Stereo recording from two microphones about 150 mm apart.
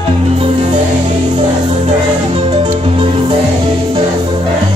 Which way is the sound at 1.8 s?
40° right (ahead or behind).